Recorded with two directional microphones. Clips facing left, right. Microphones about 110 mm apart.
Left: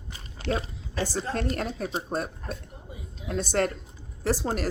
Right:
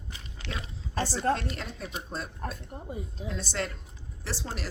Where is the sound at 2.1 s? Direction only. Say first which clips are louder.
Left 5 dB; 55° left (ahead or behind).